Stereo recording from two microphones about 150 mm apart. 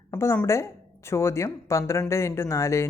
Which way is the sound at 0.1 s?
15° left (ahead or behind).